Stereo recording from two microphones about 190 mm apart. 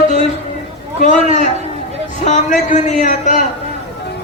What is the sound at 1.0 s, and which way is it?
A man's voice, 40° left (ahead or behind).